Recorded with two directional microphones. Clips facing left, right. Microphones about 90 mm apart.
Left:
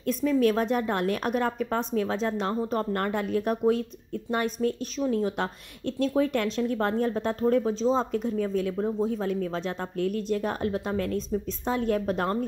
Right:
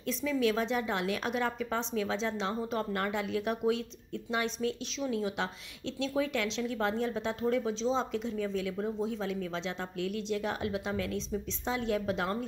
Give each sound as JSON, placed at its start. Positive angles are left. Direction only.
{"t": 0.0, "sound": "a woman's voice", "side_deg": 50}